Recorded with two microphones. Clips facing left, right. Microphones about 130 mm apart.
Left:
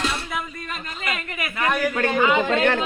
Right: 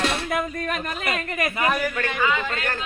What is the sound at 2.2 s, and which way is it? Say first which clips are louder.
Speech: left 4 dB; 20° left (ahead or behind).